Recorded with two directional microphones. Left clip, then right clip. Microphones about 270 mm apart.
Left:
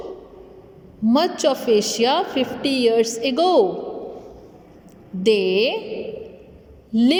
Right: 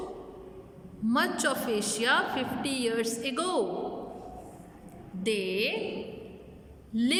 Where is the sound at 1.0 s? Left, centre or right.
Centre.